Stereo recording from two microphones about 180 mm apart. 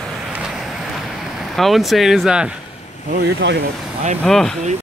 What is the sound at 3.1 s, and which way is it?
Speech, 75° right (ahead or behind).